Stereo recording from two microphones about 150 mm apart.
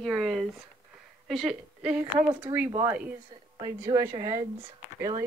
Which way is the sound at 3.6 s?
20° right (ahead or behind).